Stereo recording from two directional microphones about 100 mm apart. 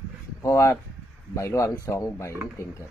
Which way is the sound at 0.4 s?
30° left (ahead or behind).